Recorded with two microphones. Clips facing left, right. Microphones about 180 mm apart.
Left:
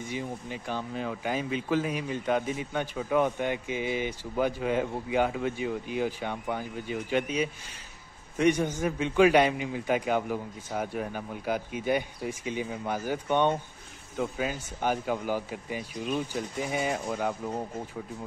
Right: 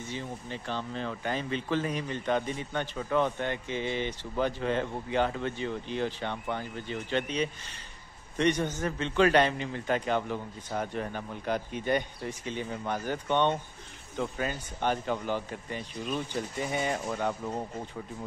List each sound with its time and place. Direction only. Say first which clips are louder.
0.0 s speech: left 3 dB; 10° left (ahead or behind)